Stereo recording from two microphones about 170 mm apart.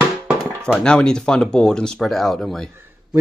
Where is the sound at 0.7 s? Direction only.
5° left (ahead or behind).